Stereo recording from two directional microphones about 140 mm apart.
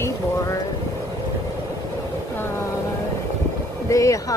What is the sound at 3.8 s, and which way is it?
Speech, 20° left (ahead or behind).